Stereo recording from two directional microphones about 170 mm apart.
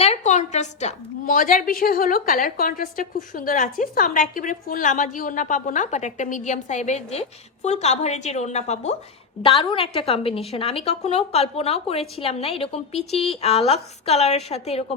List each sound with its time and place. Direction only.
0.0 s a woman's voice: 40° left (ahead or behind)
9.4 s a woman's voice: 30° left (ahead or behind)